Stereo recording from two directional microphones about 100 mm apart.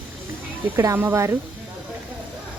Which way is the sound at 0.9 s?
25° right (ahead or behind).